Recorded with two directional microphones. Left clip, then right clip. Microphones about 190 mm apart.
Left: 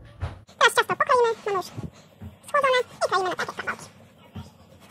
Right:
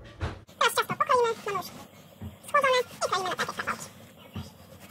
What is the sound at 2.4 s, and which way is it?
Speech, 15° left (ahead or behind).